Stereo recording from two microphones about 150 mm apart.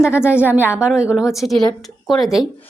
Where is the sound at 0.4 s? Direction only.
10° right (ahead or behind).